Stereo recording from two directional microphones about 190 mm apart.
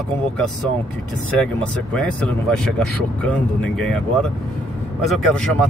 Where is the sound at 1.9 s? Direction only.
5° left (ahead or behind).